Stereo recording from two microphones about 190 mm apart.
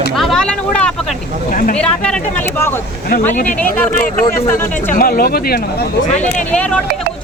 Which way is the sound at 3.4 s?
10° left (ahead or behind).